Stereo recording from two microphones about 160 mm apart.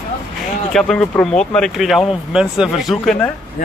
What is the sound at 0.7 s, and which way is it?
Speech, 5° left (ahead or behind).